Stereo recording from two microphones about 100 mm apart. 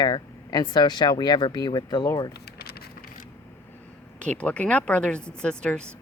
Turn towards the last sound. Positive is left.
turn(degrees=10)  # may be behind; listen again after turning